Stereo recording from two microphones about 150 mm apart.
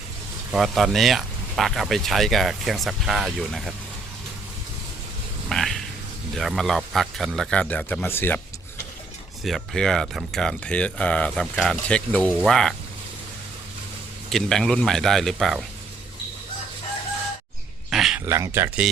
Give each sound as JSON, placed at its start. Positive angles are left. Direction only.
{"t": 0.5, "sound": "speech", "side_deg": 0}
{"t": 5.5, "sound": "a sound", "side_deg": 5}
{"t": 6.3, "sound": "speech", "side_deg": 0}
{"t": 9.4, "sound": "speech", "side_deg": 0}
{"t": 14.3, "sound": "speech", "side_deg": 0}
{"t": 17.9, "sound": "a sound", "side_deg": 0}
{"t": 18.3, "sound": "speech", "side_deg": -20}